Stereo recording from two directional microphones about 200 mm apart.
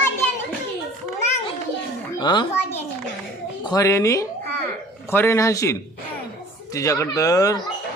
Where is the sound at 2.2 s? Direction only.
20° left (ahead or behind).